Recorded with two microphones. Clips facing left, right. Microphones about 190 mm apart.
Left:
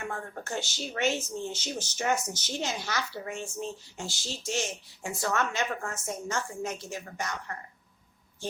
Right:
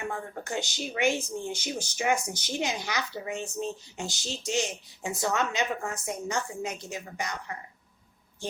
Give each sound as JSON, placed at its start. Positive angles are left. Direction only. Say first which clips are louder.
{"t": 0.0, "sound": "speech", "louder": "right 2 dB", "side_deg": -15}